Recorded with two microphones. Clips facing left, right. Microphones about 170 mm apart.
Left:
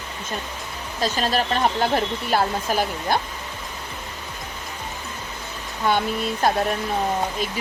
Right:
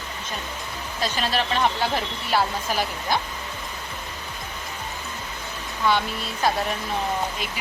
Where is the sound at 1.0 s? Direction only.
40° left (ahead or behind).